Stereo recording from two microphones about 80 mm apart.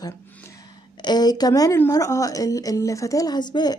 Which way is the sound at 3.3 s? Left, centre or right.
Left.